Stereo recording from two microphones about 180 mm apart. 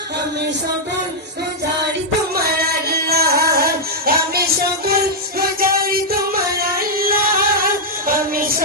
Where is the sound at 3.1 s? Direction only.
60° right (ahead or behind).